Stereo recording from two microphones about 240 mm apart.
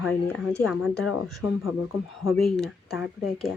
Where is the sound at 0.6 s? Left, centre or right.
Centre.